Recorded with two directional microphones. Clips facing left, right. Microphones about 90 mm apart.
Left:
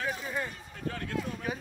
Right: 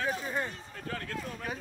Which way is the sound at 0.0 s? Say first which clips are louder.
Right 1 dB; 30° right (ahead or behind).